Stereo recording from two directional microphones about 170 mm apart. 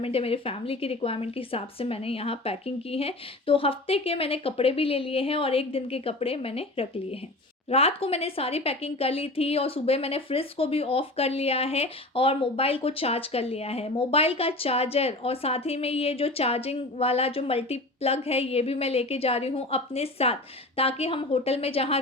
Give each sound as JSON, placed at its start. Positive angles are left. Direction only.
{"t": 0.0, "sound": "speech", "side_deg": 35}